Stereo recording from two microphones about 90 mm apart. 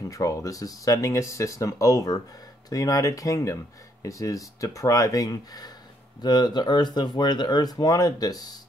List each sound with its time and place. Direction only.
0.1 s speech: 40° left (ahead or behind)